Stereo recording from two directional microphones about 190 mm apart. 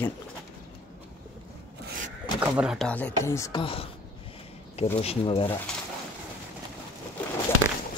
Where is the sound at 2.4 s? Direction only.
5° right (ahead or behind); by 3.6 s 15° left (ahead or behind).